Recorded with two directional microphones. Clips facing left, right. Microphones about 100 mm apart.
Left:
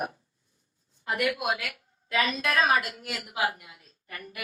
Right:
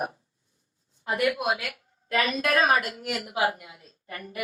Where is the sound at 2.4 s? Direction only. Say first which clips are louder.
Right 2 dB; 40° right (ahead or behind).